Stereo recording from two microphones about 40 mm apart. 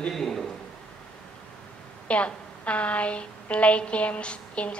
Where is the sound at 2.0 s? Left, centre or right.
Left.